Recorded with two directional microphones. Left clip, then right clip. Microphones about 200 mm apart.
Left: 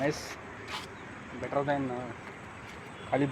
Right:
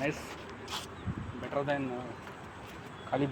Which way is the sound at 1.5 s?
30° left (ahead or behind).